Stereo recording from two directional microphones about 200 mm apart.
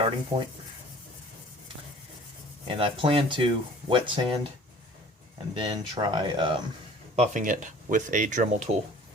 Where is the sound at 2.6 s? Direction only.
25° right (ahead or behind).